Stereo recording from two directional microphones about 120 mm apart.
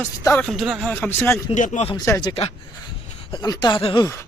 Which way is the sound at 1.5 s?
90° left.